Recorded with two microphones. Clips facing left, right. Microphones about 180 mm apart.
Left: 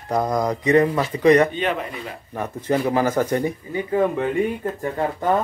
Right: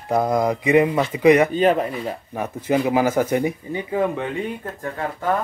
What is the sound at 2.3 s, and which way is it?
Speech, 10° right (ahead or behind).